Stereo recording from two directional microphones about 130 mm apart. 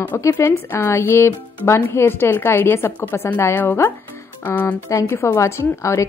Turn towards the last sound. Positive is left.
turn(degrees=25)  # may be behind; listen again after turning